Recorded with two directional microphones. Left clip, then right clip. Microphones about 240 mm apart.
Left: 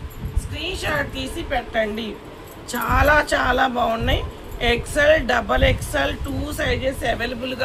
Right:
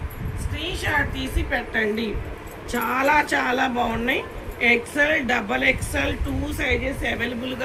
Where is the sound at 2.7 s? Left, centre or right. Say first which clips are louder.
Left 3 dB; left.